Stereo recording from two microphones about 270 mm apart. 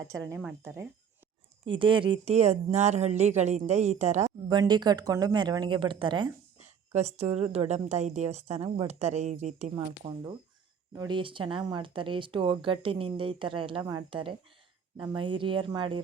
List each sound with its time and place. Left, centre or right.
0.3 s speech: centre